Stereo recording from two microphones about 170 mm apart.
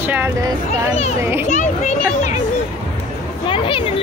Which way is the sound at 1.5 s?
45° left (ahead or behind).